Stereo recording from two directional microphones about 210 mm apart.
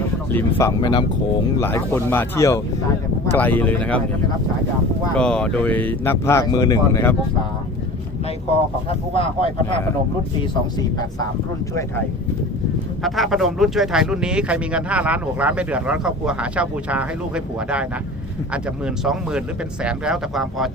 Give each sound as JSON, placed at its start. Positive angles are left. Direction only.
{"t": 0.3, "sound": "speech", "side_deg": 10}
{"t": 0.8, "sound": "speech", "side_deg": 20}
{"t": 5.1, "sound": "speech", "side_deg": 5}
{"t": 9.1, "sound": "speech", "side_deg": 25}
{"t": 13.0, "sound": "speech", "side_deg": 0}